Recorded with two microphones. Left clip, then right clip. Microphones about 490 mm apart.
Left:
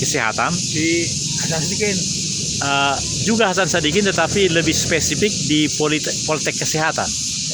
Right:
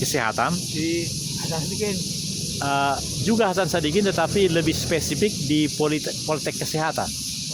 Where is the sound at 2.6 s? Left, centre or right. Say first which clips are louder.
Left 4 dB; right.